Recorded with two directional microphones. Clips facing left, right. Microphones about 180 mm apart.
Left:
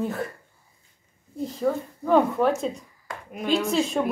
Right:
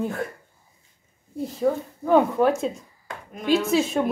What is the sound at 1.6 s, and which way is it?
Speech, 5° right (ahead or behind).